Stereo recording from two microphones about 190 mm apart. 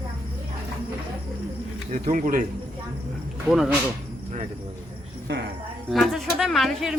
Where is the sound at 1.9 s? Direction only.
45° right (ahead or behind).